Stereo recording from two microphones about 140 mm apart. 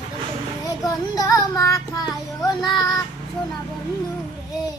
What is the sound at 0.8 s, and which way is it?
Child singing, 25° left (ahead or behind).